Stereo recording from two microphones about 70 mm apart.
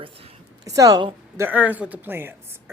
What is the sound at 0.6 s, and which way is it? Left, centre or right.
Speech, right.